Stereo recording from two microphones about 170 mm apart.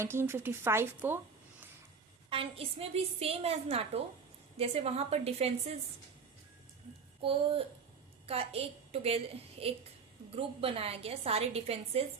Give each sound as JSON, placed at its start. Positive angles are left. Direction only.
{"t": 0.0, "sound": "speech", "side_deg": -15}
{"t": 2.3, "sound": "a woman's voice", "side_deg": -35}
{"t": 7.2, "sound": "a woman's voice", "side_deg": -35}